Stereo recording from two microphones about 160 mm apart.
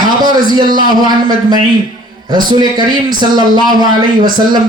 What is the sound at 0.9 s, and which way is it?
Speech, 25° right (ahead or behind).